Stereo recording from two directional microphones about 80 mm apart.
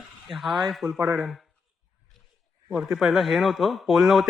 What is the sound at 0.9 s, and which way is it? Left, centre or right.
Speech, right.